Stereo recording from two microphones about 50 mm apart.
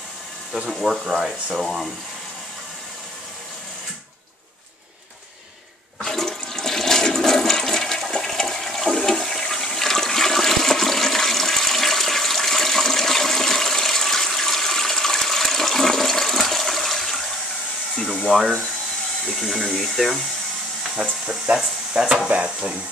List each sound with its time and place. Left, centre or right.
0.7 s speech: centre
1.6 s speech: centre
5.9 s toilet flush: centre
18.3 s a sound: centre
19.2 s hair dryer: centre
20.9 s a sound: centre
21.9 s speech: centre
22.3 s stir: right